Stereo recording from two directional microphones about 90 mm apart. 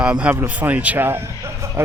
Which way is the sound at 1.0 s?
30° right (ahead or behind).